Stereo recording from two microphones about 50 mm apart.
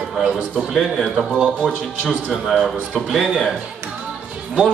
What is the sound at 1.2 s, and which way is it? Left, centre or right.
Speech, centre.